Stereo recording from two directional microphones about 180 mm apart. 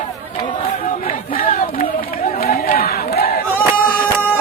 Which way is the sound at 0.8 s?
50° left (ahead or behind).